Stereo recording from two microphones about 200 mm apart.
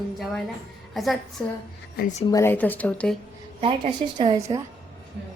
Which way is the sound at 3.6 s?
25° right (ahead or behind).